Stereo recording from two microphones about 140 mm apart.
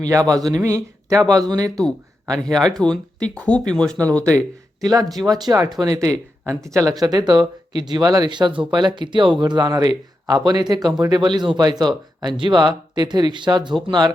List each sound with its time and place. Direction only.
0.0 s speech: 25° right (ahead or behind)
2.4 s speech: 5° left (ahead or behind)
4.8 s speech: 25° right (ahead or behind)